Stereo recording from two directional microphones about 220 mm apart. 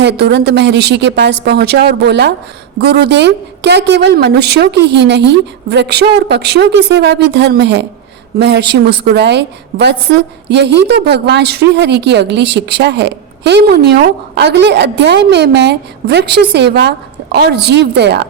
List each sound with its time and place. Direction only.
0.0 s a woman's voice: 50° right (ahead or behind)